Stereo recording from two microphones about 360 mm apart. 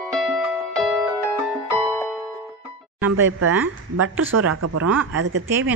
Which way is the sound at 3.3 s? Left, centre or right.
Right.